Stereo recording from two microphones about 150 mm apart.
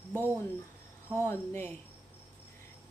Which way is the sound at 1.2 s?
15° left (ahead or behind).